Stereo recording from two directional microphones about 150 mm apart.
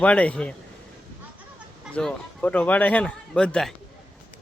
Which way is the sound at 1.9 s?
10° left (ahead or behind).